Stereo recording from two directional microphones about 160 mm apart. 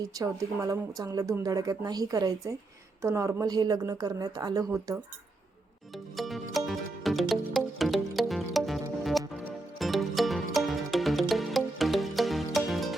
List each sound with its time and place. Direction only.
0.1 s speech: 20° right (ahead or behind)
6.1 s music: centre (ahead or behind)